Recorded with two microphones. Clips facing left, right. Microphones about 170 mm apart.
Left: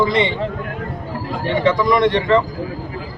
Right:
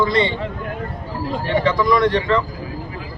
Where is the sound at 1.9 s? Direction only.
20° left (ahead or behind).